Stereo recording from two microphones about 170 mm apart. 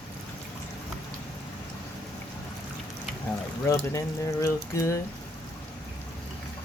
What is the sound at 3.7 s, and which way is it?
Speech, 15° left (ahead or behind).